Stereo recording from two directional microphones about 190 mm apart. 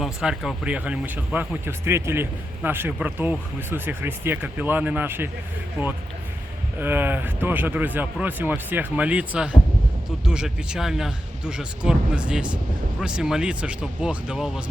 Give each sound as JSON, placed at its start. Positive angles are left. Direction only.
{"t": 0.0, "sound": "speech", "side_deg": -5}